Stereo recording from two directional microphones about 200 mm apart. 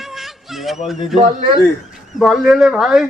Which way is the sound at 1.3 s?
40° right (ahead or behind).